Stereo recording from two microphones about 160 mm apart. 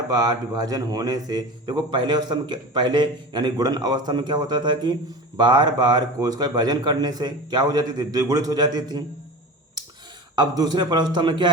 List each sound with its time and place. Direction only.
0.1 s a man's voice: 25° right (ahead or behind)
10.3 s a man's voice: 25° right (ahead or behind)